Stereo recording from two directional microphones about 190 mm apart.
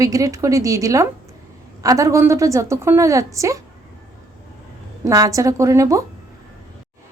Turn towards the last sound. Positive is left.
turn(degrees=-15)  # may be behind; listen again after turning